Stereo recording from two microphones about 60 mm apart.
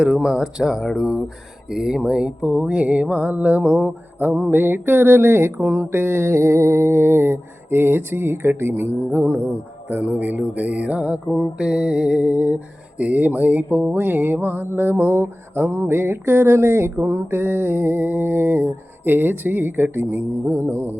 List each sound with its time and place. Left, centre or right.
0.0 s speech: centre
1.7 s mantra: centre; by 9.4 s right
9.9 s mantra: right